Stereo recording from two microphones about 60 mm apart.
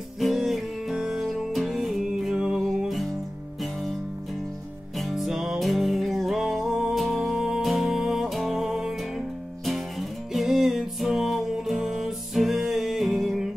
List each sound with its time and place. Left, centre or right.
0.2 s music: centre
2.8 s music: centre
4.9 s music: centre